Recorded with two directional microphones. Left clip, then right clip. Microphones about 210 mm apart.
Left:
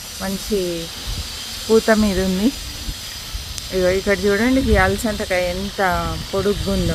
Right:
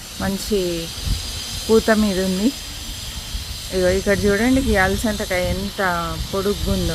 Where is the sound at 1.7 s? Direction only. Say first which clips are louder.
Left 1 dB; 5° right (ahead or behind).